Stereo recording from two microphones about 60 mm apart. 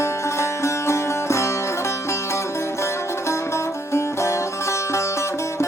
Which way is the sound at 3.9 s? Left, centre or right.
Left.